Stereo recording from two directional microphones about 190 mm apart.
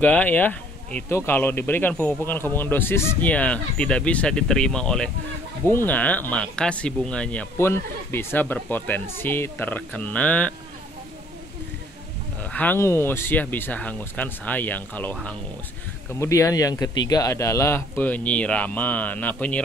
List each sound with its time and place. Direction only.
0.0 s speech: 10° left (ahead or behind)
12.5 s speech: 10° left (ahead or behind)
16.2 s speech: 15° left (ahead or behind)